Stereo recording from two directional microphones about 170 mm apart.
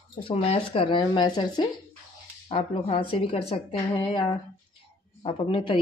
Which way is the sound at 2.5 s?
35° left (ahead or behind).